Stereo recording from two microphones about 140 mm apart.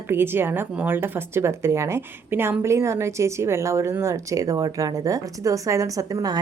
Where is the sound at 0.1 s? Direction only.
15° right (ahead or behind).